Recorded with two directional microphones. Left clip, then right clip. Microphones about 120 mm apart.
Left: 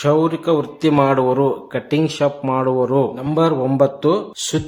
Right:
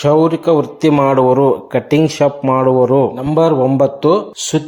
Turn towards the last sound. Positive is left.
turn(degrees=-20)  # may be behind; listen again after turning